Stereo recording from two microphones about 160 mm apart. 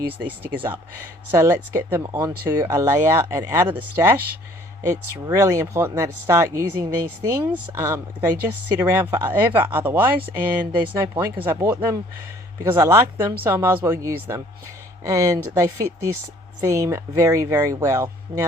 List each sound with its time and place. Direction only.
0.3 s speech: 10° right (ahead or behind)
10.8 s speech: 25° right (ahead or behind)